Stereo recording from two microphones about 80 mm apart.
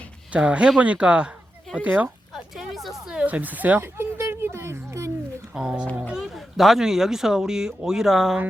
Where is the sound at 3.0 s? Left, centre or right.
Centre.